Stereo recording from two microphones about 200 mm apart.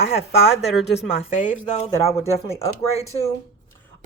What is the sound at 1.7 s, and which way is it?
A woman's voice, 30° left (ahead or behind).